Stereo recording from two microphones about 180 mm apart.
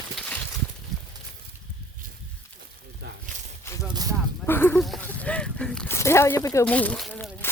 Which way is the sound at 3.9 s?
20° right (ahead or behind).